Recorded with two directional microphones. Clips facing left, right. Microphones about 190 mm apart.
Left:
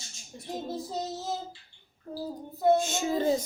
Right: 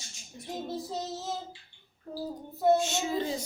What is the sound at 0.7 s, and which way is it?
Speech, centre (ahead or behind).